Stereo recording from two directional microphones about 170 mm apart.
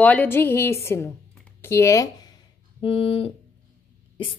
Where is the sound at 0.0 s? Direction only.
10° left (ahead or behind).